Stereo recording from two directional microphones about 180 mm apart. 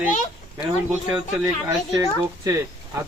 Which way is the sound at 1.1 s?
15° right (ahead or behind).